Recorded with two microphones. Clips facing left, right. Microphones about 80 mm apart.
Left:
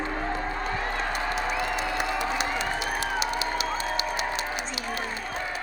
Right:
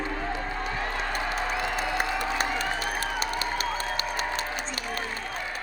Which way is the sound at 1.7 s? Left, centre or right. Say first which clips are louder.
Even; right.